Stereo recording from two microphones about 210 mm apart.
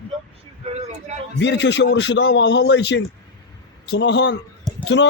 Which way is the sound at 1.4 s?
55° left (ahead or behind).